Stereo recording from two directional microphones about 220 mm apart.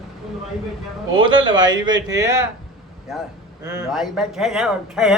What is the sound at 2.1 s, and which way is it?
Speech, 15° right (ahead or behind).